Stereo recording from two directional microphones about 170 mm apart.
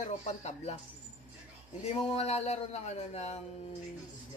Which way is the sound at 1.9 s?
35° left (ahead or behind).